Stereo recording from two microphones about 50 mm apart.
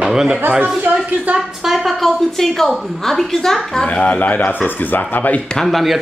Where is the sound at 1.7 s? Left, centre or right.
Centre.